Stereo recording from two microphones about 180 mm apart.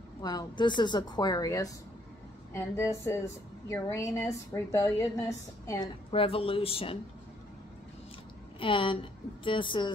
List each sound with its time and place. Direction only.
0.2 s a woman's voice: 20° left (ahead or behind)
6.1 s speech: 30° left (ahead or behind)
8.5 s a woman's voice: 30° left (ahead or behind)